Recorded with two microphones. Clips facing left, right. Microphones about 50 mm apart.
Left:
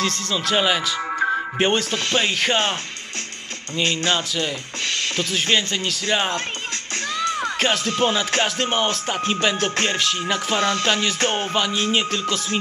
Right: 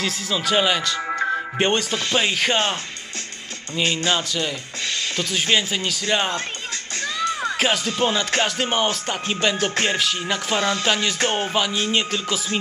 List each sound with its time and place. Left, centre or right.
0.0 s speech: centre
3.7 s speech: centre
5.1 s speech: centre
7.3 s music: centre
8.0 s speech: centre